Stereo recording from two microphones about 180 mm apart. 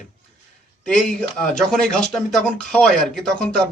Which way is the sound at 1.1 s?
5° left (ahead or behind).